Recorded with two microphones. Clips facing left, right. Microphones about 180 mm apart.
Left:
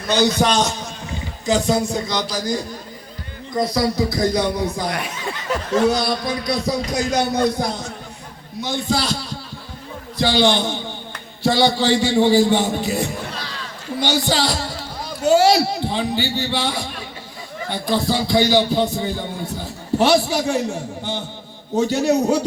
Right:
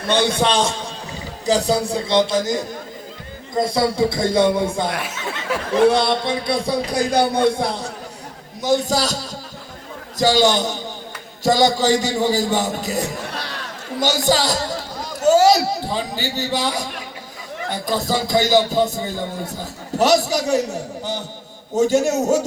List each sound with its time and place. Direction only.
0.1 s a man's voice: 30° right (ahead or behind)
3.5 s music: 25° right (ahead or behind)
4.9 s speech: 5° right (ahead or behind)
5.9 s music: 25° right (ahead or behind)
8.6 s a man's voice: 40° right (ahead or behind)
13.3 s a sound: 65° right (ahead or behind)
14.0 s a man's voice: 45° right (ahead or behind)